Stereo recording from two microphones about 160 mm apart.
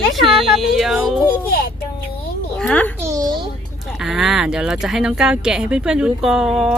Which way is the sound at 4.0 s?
5° right (ahead or behind).